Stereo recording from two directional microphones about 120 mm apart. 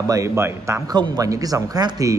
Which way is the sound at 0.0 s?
30° right (ahead or behind).